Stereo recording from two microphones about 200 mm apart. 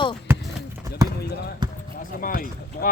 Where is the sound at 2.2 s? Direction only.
45° left (ahead or behind).